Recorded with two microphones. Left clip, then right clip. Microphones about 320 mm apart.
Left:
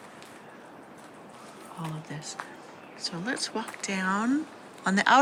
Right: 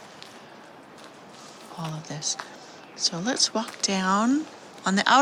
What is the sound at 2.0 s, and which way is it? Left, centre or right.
Speech, centre.